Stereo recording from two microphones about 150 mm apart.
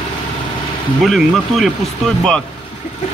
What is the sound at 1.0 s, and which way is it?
Speech, centre (ahead or behind).